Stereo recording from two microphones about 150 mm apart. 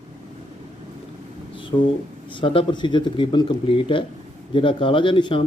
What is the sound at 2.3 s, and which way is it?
Speech, 35° left (ahead or behind).